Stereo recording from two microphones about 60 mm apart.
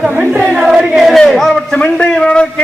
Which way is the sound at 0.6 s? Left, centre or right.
Centre.